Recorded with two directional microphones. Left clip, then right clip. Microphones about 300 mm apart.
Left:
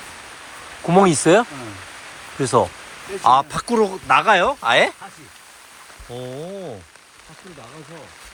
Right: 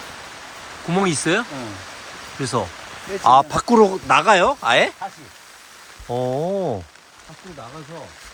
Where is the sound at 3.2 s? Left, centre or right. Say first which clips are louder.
Right 2 dB; centre.